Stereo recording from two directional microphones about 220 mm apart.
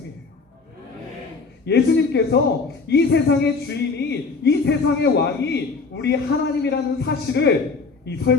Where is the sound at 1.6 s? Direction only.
50° left (ahead or behind).